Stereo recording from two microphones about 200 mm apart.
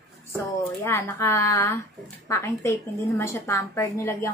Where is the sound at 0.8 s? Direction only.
15° left (ahead or behind).